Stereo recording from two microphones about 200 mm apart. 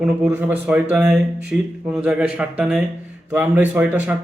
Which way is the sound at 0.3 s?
10° right (ahead or behind).